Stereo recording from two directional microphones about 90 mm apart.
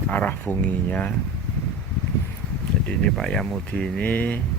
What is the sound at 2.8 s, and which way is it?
Speech, 5° left (ahead or behind).